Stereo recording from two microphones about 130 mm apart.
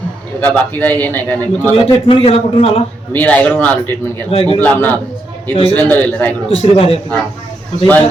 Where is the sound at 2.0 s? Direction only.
45° left (ahead or behind).